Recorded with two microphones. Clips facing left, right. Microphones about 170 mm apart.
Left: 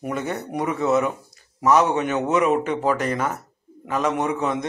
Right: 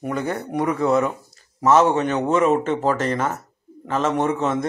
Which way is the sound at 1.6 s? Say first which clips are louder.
Right 2 dB; 15° left (ahead or behind).